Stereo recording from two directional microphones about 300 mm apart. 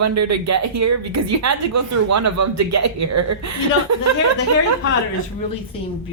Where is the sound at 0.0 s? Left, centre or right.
Right.